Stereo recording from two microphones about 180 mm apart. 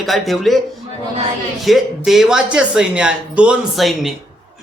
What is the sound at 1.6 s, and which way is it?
Speech, centre (ahead or behind).